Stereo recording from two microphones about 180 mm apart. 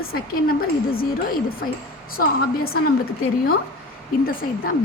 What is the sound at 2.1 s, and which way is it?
Speech, 55° left (ahead or behind).